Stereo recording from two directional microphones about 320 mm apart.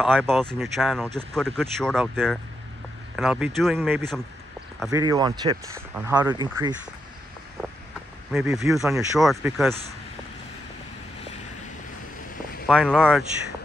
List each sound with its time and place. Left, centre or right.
0.0 s speech: centre
5.0 s speech: centre
8.3 s speech: centre
12.6 s speech: centre